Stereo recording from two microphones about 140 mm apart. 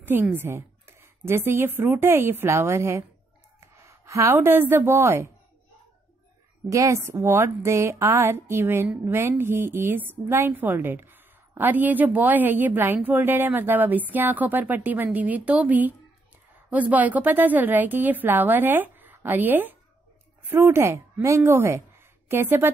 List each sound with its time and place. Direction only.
0.0 s a woman's voice: 15° right (ahead or behind)
6.7 s a woman's voice: 20° right (ahead or behind)